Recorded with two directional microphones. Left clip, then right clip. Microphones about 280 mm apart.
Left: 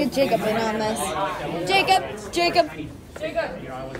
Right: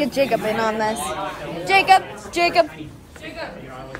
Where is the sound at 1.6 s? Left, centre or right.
Right.